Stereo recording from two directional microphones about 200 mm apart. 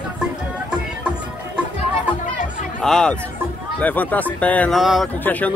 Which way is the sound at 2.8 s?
5° left (ahead or behind).